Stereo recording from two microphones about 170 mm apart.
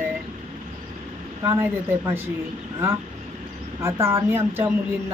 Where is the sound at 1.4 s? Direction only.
15° right (ahead or behind).